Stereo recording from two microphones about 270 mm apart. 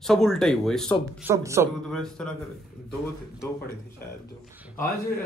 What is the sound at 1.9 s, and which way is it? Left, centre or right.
Speech, centre.